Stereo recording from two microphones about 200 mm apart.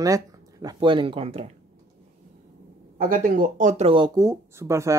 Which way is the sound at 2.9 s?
45° right (ahead or behind).